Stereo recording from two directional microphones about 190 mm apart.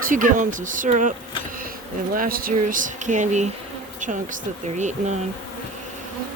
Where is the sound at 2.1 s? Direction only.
50° right (ahead or behind).